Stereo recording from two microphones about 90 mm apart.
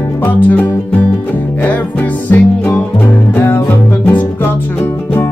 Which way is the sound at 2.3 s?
25° left (ahead or behind).